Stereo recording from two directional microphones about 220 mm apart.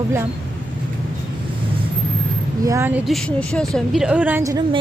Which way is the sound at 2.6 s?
15° right (ahead or behind).